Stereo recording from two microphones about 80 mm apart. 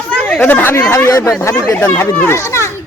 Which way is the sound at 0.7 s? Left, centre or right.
Left.